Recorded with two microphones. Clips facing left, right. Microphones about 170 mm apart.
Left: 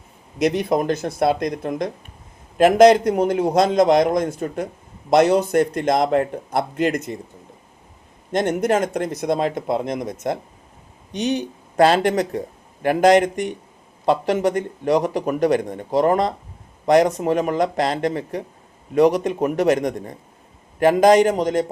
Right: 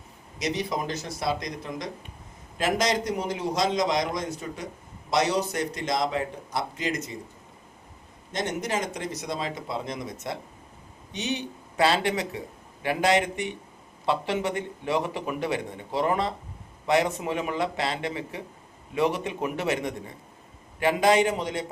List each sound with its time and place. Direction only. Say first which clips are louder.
0.3 s a man's voice: left 10 dB; 55° left (ahead or behind)
8.3 s speech: left 10 dB; 55° left (ahead or behind)